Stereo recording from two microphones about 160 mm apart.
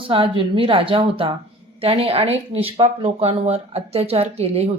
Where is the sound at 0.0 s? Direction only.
35° right (ahead or behind).